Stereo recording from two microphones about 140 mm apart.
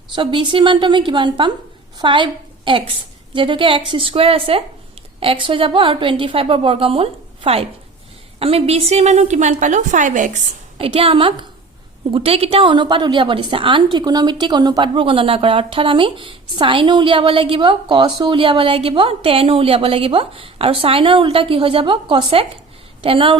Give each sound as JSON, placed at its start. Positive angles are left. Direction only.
{"t": 0.2, "sound": "a woman's voice", "side_deg": -35}
{"t": 10.8, "sound": "speech", "side_deg": -40}